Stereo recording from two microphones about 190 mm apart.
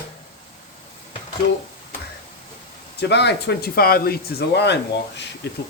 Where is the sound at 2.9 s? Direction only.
65° left (ahead or behind).